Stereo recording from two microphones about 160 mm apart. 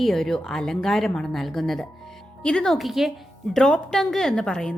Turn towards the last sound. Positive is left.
turn(degrees=5)  # may be behind; listen again after turning